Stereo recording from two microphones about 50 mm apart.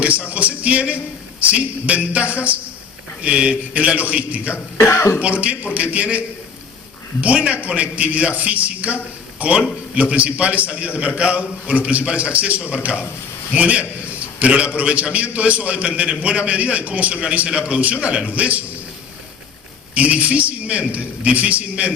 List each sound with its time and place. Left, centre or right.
0.0 s music: right
1.4 s a man's voice: right
4.5 s speech: left
5.2 s a man's voice: right
19.9 s a man's voice: right